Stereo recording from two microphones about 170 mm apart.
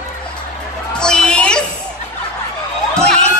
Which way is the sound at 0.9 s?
5° left (ahead or behind).